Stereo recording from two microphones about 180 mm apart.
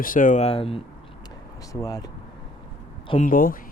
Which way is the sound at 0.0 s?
50° left (ahead or behind).